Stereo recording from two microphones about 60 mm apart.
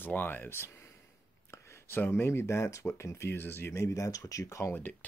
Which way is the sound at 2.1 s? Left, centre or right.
Left.